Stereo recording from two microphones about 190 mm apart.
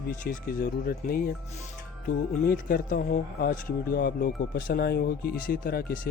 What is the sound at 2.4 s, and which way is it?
Speech, 50° left (ahead or behind).